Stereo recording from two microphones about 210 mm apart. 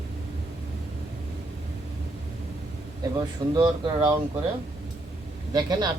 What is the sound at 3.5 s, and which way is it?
Speech, 20° right (ahead or behind).